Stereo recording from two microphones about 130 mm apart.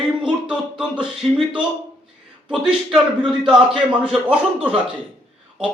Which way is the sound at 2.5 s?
5° right (ahead or behind).